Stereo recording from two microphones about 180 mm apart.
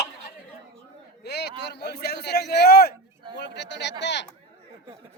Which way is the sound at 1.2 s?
65° left (ahead or behind).